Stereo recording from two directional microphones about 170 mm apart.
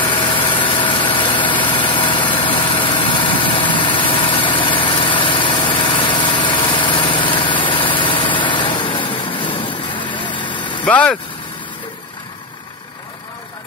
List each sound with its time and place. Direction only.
0.1 s vehicle: 30° left (ahead or behind)
10.9 s speech: 10° left (ahead or behind)